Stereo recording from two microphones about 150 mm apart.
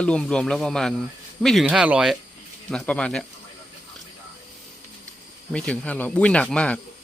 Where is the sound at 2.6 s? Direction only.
5° left (ahead or behind).